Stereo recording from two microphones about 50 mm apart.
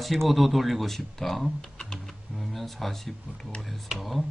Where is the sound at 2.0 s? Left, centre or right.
Centre.